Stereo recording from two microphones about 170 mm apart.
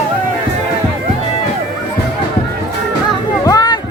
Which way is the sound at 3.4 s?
25° left (ahead or behind).